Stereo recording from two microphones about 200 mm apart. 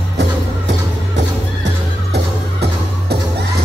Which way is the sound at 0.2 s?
65° right (ahead or behind).